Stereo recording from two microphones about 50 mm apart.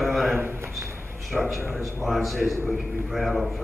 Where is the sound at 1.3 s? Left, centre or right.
Centre.